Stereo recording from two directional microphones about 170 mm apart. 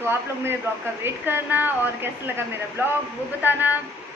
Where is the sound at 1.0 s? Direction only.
10° right (ahead or behind).